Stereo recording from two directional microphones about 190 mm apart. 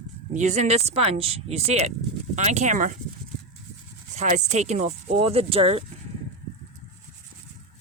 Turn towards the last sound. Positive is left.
turn(degrees=-30)  # may be behind; listen again after turning